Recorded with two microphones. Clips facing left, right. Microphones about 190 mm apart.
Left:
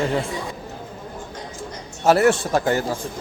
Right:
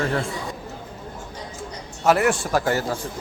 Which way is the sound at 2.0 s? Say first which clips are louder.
Left 3 dB; 25° left (ahead or behind).